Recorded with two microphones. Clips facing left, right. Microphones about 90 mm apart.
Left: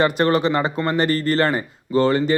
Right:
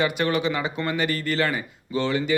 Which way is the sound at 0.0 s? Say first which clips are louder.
Left 5 dB; 40° left (ahead or behind).